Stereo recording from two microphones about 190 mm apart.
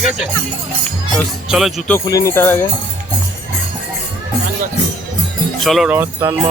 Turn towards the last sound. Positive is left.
turn(degrees=-15)  # may be behind; listen again after turning